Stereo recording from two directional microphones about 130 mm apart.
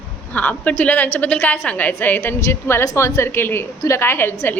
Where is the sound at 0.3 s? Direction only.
15° left (ahead or behind).